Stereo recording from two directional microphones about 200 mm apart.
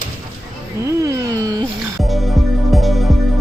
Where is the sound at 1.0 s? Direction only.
15° right (ahead or behind).